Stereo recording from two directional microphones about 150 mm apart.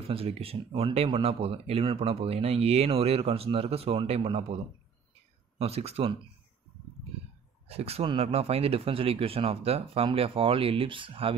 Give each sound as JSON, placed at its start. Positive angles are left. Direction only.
{"t": 0.1, "sound": "speech", "side_deg": -40}
{"t": 5.6, "sound": "speech", "side_deg": -45}
{"t": 7.6, "sound": "speech", "side_deg": -40}